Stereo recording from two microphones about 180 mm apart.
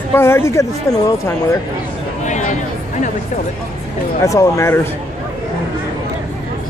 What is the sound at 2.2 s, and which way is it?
Chatter, 40° left (ahead or behind).